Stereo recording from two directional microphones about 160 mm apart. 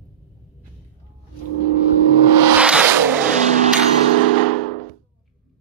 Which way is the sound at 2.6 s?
5° right (ahead or behind).